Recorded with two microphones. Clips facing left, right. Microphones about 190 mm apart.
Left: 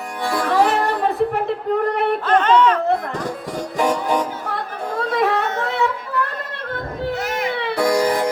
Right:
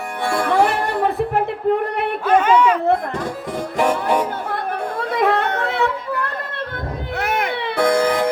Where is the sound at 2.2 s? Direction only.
10° right (ahead or behind).